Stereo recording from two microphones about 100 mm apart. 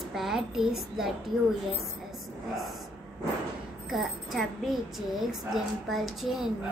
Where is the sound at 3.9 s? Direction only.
Centre (ahead or behind).